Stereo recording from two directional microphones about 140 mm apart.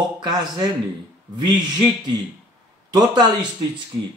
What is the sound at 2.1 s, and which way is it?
Speech, 30° right (ahead or behind).